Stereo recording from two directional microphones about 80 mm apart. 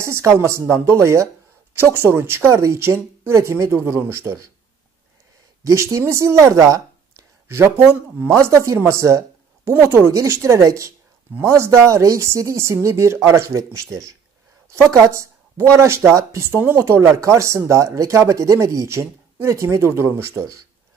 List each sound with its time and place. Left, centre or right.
0.0 s speech: right
5.6 s speech: right